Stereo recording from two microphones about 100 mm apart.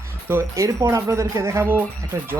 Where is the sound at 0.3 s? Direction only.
25° right (ahead or behind).